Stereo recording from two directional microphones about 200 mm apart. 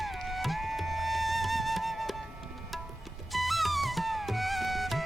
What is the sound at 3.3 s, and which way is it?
Music, centre (ahead or behind).